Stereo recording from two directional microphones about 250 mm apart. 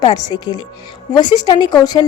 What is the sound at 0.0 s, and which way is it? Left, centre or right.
A woman's voice, centre.